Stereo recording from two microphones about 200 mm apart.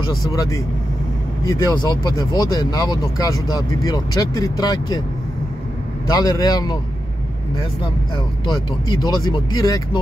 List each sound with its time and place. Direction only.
0.3 s a man's voice: 15° left (ahead or behind)
6.0 s a man's voice: 20° left (ahead or behind)
8.5 s speech: 20° left (ahead or behind)